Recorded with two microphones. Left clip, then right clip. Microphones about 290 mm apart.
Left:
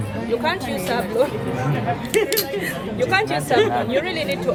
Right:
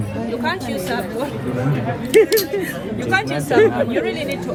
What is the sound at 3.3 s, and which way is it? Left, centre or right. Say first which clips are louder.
Speech: right 3 dB; left.